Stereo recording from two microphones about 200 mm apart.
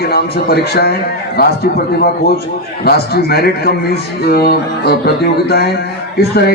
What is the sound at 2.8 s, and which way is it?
A man's voice, 50° left (ahead or behind).